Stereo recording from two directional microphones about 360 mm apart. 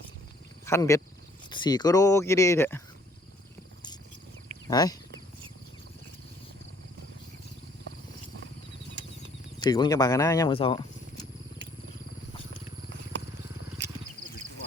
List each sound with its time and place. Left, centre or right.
0.6 s speech: centre
4.7 s speech: centre
9.0 s a sound: right
9.6 s speech: centre